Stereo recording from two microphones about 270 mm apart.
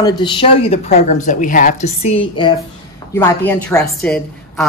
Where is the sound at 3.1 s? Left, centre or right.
Centre.